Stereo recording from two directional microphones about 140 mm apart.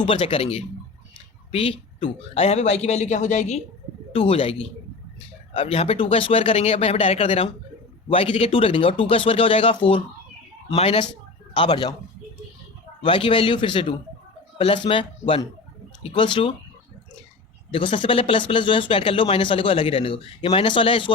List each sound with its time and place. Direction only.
0.0 s a woman's voice: 40° left (ahead or behind); by 3.6 s 60° left (ahead or behind)
4.1 s a woman's voice: 45° left (ahead or behind)
5.5 s a woman's voice: 45° left (ahead or behind)
11.5 s speech: 35° left (ahead or behind)
13.0 s speech: 40° left (ahead or behind)
16.0 s speech: 35° left (ahead or behind)
17.7 s speech: 35° left (ahead or behind)